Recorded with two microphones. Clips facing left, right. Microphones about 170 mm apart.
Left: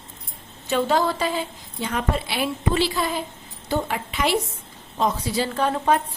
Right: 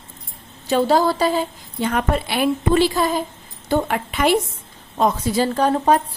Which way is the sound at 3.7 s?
55° right (ahead or behind).